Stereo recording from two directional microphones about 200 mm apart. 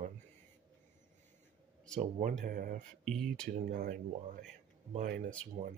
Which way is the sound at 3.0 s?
Centre (ahead or behind).